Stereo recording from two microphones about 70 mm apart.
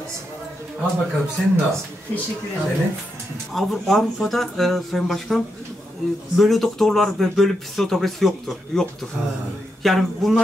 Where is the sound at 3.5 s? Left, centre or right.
Centre.